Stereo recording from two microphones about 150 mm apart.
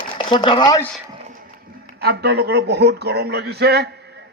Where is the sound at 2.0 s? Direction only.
90° right.